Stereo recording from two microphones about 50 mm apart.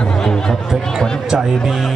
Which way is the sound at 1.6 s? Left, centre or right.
Centre.